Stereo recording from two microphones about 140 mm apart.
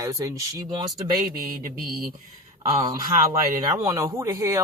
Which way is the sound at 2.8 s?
35° right (ahead or behind).